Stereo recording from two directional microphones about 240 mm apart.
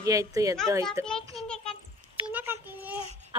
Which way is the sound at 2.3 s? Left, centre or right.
Centre.